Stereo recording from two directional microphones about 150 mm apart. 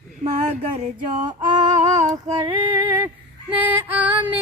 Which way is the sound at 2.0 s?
45° right (ahead or behind).